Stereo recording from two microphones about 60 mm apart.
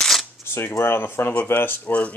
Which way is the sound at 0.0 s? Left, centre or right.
Centre.